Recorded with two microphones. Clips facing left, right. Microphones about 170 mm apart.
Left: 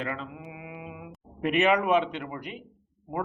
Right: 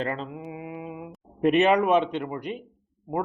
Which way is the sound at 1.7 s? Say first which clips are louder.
Right 3 dB; 20° right (ahead or behind).